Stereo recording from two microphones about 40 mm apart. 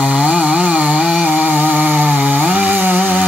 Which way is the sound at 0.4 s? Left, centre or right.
Right.